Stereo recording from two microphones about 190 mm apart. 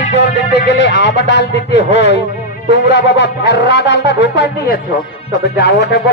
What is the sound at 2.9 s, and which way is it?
Speech, 65° left (ahead or behind).